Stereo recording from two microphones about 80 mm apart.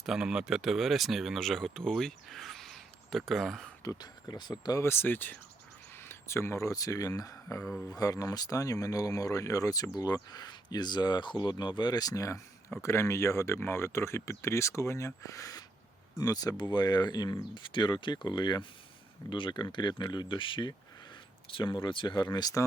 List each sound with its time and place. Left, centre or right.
0.0 s speech: centre
4.0 s speech: left
4.8 s speech: left
17.5 s speech: left